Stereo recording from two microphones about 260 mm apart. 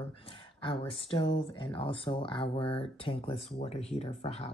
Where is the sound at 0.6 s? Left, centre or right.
Left.